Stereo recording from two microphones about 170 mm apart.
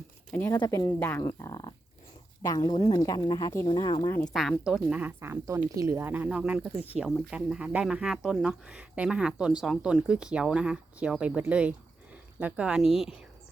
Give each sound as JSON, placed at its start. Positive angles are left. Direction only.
{"t": 0.5, "sound": "a woman's voice", "side_deg": 25}
{"t": 0.9, "sound": "a woman's voice", "side_deg": 10}
{"t": 4.1, "sound": "a woman's voice", "side_deg": 5}